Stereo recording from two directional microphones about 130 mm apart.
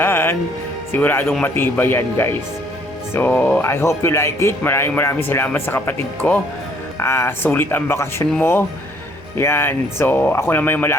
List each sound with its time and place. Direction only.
0.0 s music: 15° left (ahead or behind)
0.9 s speech: 15° left (ahead or behind)